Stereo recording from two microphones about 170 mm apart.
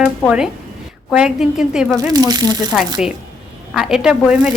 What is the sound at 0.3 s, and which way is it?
Speech, 5° right (ahead or behind).